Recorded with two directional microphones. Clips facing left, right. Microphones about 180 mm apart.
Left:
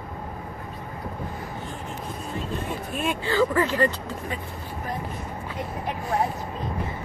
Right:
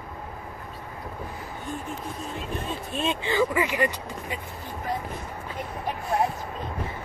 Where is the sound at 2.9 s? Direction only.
25° right (ahead or behind).